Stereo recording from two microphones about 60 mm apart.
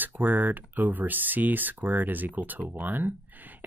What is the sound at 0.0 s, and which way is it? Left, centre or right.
Speech, right.